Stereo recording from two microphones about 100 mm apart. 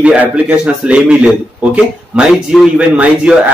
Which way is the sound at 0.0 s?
15° right (ahead or behind).